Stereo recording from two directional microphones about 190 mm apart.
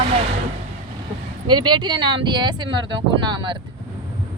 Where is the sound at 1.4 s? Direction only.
25° right (ahead or behind).